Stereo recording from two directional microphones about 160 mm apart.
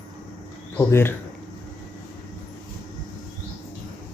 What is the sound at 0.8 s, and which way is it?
Speech, 15° left (ahead or behind).